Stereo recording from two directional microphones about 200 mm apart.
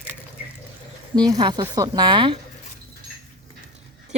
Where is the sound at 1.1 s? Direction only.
20° right (ahead or behind).